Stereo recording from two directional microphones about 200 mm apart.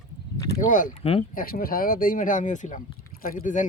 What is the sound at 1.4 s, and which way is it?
Speech, 45° left (ahead or behind).